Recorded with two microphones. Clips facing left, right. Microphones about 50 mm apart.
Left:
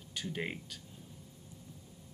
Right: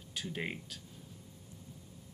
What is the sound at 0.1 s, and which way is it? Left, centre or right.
Speech, centre.